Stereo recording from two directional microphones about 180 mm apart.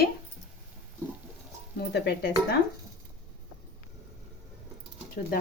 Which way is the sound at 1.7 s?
65° left (ahead or behind).